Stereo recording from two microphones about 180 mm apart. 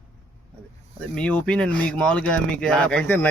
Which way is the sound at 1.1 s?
5° left (ahead or behind).